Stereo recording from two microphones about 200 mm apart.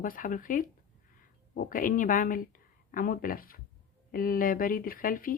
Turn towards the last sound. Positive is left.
turn(degrees=45)  # may be behind; listen again after turning